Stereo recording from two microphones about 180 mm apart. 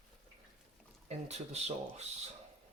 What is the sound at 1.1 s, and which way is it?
Speech, 35° right (ahead or behind).